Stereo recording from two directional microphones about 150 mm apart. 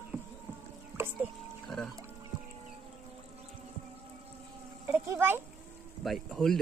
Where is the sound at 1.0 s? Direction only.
15° right (ahead or behind).